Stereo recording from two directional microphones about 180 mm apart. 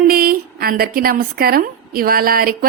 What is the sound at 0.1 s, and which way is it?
A woman's voice, 55° right (ahead or behind).